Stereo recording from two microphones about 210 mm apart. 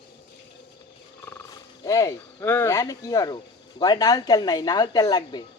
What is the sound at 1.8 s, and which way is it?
Speech, 15° left (ahead or behind).